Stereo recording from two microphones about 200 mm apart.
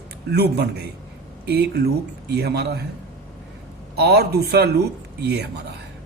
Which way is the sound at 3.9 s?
55° right (ahead or behind).